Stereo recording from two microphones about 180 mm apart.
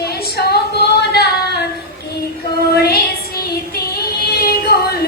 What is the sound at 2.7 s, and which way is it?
Child singing, 60° left (ahead or behind).